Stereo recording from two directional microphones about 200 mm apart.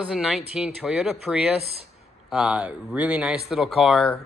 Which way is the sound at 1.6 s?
30° right (ahead or behind).